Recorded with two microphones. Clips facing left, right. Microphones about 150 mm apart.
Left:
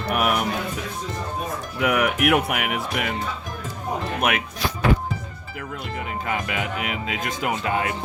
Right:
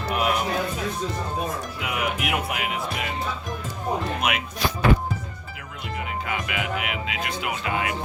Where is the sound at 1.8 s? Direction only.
65° left (ahead or behind).